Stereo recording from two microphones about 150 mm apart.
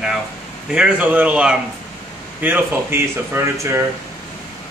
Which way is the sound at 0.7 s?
10° right (ahead or behind).